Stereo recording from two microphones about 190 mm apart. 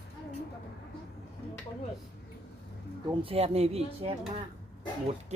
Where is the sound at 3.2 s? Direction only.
30° right (ahead or behind).